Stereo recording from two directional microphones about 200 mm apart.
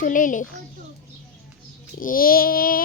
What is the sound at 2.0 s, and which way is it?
Speech, 45° left (ahead or behind).